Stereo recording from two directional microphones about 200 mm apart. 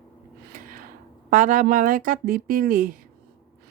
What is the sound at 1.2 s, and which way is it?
Speech, 40° right (ahead or behind).